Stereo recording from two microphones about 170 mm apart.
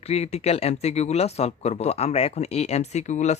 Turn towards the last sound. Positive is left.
turn(degrees=45)  # may be behind; listen again after turning